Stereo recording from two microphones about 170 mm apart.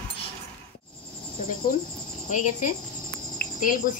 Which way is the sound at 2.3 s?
50° left (ahead or behind).